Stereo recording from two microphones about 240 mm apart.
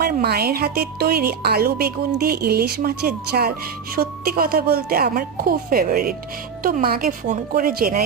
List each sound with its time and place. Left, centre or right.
0.0 s speech: right